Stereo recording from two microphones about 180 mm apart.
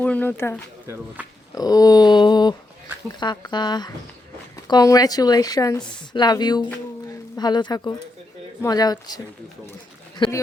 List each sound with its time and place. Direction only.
0.0 s speech: 10° left (ahead or behind)
0.9 s speech: 10° right (ahead or behind)
1.5 s a sound: 20° left (ahead or behind)
3.2 s a woman's voice: 25° left (ahead or behind)